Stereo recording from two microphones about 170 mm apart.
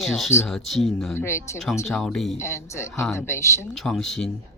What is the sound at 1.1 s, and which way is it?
Speech, 15° left (ahead or behind).